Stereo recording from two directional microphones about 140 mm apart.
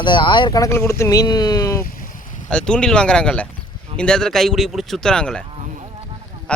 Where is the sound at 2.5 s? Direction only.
5° left (ahead or behind).